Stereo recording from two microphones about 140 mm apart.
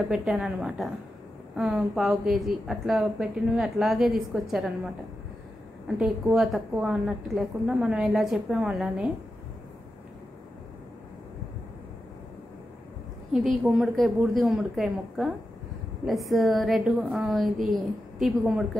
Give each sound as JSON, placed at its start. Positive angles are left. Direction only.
{"t": 0.1, "sound": "a woman's voice", "side_deg": -5}
{"t": 5.9, "sound": "a woman's voice", "side_deg": -5}
{"t": 13.3, "sound": "a woman's voice", "side_deg": 0}